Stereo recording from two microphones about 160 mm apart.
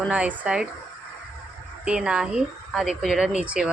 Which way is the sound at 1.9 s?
5° right (ahead or behind).